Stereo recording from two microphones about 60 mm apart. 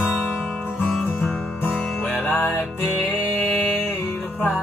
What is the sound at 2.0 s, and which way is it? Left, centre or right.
Music, left.